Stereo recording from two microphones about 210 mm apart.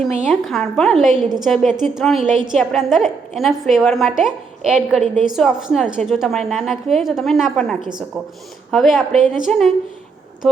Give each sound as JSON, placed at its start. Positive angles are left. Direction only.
{"t": 0.2, "sound": "a woman's voice", "side_deg": 0}
{"t": 7.8, "sound": "a woman's voice", "side_deg": -20}
{"t": 8.7, "sound": "a woman's voice", "side_deg": 0}